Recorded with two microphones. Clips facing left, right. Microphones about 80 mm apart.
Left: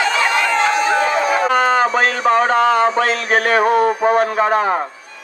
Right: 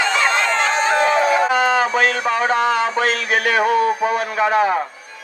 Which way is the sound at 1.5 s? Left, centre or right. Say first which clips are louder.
Left 2 dB; left.